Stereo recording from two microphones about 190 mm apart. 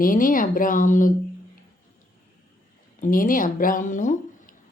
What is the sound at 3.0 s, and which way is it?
Speech, 45° left (ahead or behind).